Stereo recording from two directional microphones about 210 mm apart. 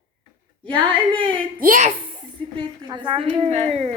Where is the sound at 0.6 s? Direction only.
25° right (ahead or behind).